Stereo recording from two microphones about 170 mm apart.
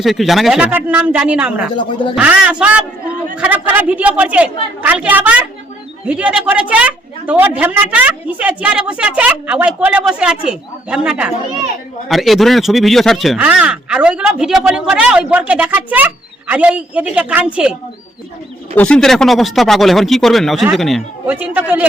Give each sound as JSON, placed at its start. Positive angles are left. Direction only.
{"t": 0.0, "sound": "a woman's voice", "side_deg": 0}
{"t": 1.7, "sound": "speech", "side_deg": 30}
{"t": 2.1, "sound": "a woman's voice", "side_deg": -5}
{"t": 18.8, "sound": "speech", "side_deg": 5}
{"t": 21.2, "sound": "a woman's voice", "side_deg": -10}